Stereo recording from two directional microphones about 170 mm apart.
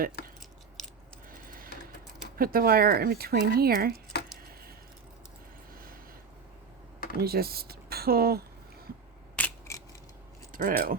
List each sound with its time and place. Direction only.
0.2 s a sound: 70° left (ahead or behind)
1.3 s a sound: 55° right (ahead or behind)
2.4 s speech: 60° right (ahead or behind)
7.2 s speech: 65° right (ahead or behind)
9.3 s scissors: 10° left (ahead or behind)
10.5 s speech: 55° right (ahead or behind)